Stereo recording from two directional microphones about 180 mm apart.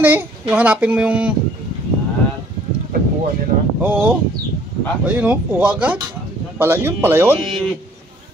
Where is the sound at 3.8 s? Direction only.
10° right (ahead or behind).